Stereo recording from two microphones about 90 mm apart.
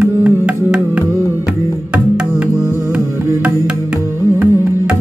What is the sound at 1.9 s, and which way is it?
Music, 10° right (ahead or behind).